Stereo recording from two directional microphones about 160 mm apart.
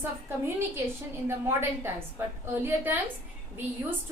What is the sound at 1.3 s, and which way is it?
A woman's voice, 15° right (ahead or behind).